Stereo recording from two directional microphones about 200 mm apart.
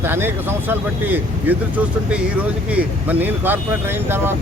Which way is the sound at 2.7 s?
5° right (ahead or behind).